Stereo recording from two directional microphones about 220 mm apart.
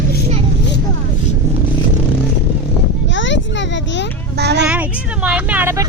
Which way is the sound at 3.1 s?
55° left (ahead or behind).